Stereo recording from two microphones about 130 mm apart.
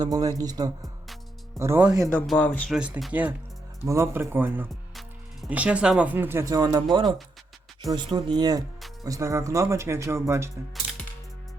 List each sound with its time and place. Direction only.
0.0 s speech: 30° right (ahead or behind)
1.5 s speech: 20° right (ahead or behind)
2.1 s speech: 5° left (ahead or behind)
2.6 s speech: 5° right (ahead or behind)